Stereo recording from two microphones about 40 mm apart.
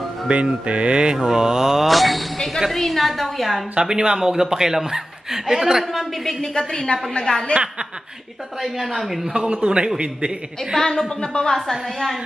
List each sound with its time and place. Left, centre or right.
0.3 s mantra: right
1.1 s speech: centre
1.9 s a woman's voice: centre
3.8 s speech: centre
5.9 s a woman's voice: centre
6.7 s a woman's voice: left
8.5 s a woman's voice: centre
9.3 s mantra: right
10.8 s a woman's voice: centre